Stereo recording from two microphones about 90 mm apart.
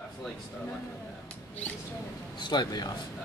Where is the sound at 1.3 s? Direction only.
15° left (ahead or behind).